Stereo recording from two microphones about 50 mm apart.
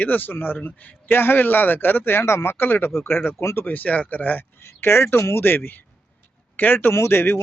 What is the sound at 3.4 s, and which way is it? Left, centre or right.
Speech, left.